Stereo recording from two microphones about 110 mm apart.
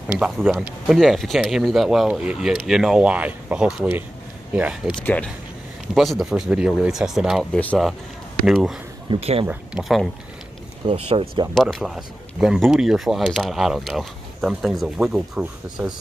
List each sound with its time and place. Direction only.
0.2 s speech: 20° right (ahead or behind)
0.6 s speech: centre (ahead or behind)
5.0 s speech: 15° left (ahead or behind)
5.9 s speech: centre (ahead or behind)
7.5 s speech: 10° left (ahead or behind)
8.5 s speech: 5° right (ahead or behind)
9.2 s speech: 65° right (ahead or behind)
10.9 s speech: 55° right (ahead or behind)
11.5 s speech: centre (ahead or behind)